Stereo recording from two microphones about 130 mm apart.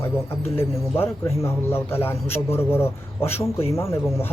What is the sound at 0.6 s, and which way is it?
Speech, 20° left (ahead or behind).